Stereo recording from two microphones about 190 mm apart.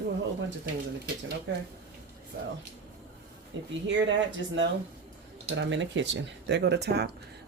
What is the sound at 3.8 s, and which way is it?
Speech, 75° right (ahead or behind).